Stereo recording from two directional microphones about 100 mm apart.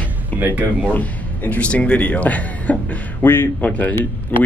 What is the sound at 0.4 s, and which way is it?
Speech, 20° right (ahead or behind).